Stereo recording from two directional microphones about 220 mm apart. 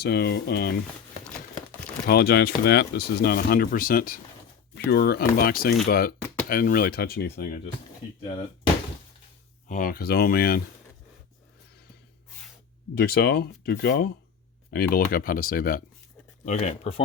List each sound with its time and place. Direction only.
0.0 s speech: 50° left (ahead or behind)
2.0 s speech: 45° left (ahead or behind)
6.1 s a sound: 5° left (ahead or behind)
6.5 s speech: 40° left (ahead or behind)
9.6 s speech: 40° left (ahead or behind)
12.9 s speech: 45° left (ahead or behind)